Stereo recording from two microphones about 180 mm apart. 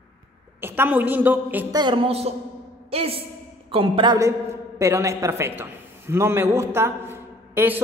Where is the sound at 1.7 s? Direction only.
25° right (ahead or behind).